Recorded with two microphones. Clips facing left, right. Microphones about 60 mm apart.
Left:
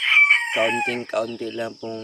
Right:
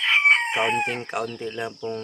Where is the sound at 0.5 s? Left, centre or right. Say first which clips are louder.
Left 2 dB; right.